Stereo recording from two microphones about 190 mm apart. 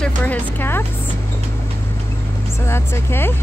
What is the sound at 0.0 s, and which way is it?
Speech, 10° left (ahead or behind).